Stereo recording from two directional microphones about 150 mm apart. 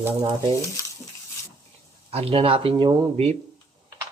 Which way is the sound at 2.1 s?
40° right (ahead or behind).